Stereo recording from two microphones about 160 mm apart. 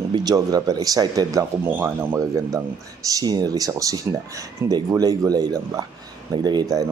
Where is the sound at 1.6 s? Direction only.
10° right (ahead or behind).